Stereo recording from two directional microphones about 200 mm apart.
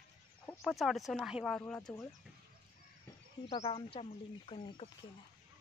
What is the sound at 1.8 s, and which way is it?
Speech, 20° left (ahead or behind).